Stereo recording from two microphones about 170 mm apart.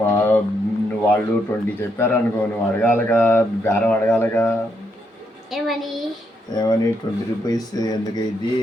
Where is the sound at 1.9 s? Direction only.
10° left (ahead or behind).